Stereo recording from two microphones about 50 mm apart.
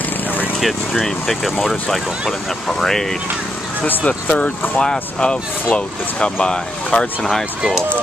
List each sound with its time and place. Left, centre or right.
0.6 s speech: centre
3.8 s speech: left; by 7.4 s centre